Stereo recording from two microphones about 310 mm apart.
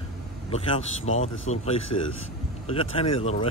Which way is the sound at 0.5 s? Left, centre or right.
Centre.